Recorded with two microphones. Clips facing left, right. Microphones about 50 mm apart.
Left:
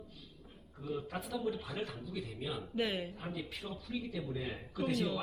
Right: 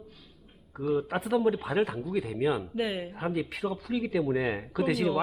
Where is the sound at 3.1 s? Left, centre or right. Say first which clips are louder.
Right 11 dB; right.